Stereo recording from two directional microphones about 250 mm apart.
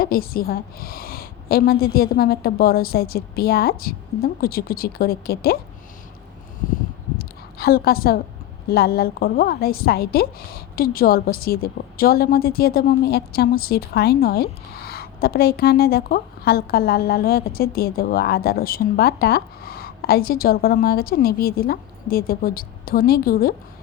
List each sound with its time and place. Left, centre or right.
0.0 s a woman's voice: left
7.2 s a sound: left
8.7 s a woman's voice: left